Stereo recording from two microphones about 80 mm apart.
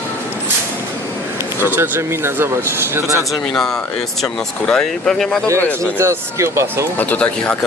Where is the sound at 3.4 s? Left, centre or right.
Centre.